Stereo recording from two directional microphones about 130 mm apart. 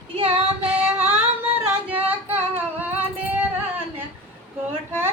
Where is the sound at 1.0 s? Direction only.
45° right (ahead or behind).